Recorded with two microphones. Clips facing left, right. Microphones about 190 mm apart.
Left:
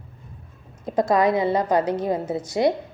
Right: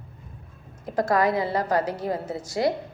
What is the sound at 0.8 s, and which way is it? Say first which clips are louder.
A woman's voice: left 3 dB; 20° left (ahead or behind).